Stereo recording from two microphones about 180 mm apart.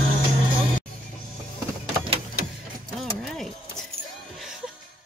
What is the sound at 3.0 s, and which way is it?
Keys jangling, centre (ahead or behind).